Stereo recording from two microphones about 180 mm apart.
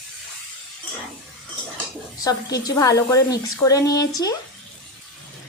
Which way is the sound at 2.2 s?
20° left (ahead or behind).